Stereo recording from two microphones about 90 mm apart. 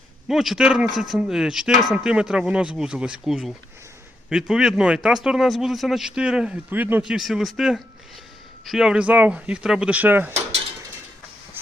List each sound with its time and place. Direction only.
0.3 s speech: 5° right (ahead or behind)
6.7 s speech: 20° right (ahead or behind)
7.0 s speech: 5° right (ahead or behind); by 10.3 s 20° right (ahead or behind)